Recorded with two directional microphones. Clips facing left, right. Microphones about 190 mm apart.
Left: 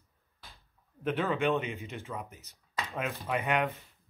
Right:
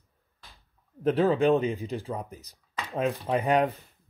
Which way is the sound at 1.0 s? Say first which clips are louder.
Right 7 dB; 35° right (ahead or behind).